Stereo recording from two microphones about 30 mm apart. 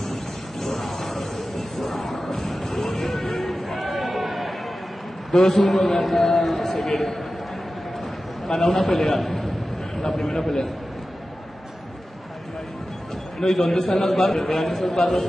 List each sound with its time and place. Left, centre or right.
0.0 s music: centre
2.2 s a sound: centre
5.3 s a man's voice: centre
8.5 s a man's voice: centre
13.4 s a man's voice: centre